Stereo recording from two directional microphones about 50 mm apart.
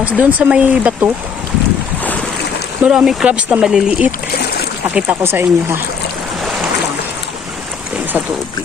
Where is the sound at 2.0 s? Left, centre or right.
Left.